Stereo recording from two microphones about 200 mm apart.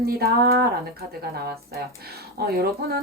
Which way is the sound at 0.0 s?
50° right (ahead or behind).